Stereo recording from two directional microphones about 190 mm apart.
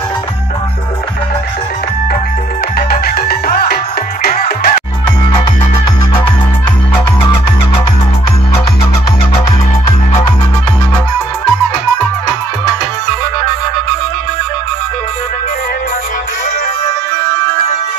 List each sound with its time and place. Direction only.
2.9 s music: 50° left (ahead or behind)